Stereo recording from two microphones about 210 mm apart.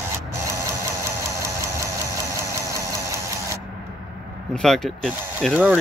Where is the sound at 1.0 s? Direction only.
15° right (ahead or behind).